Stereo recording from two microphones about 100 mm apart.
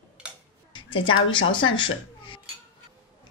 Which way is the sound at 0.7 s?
55° left (ahead or behind).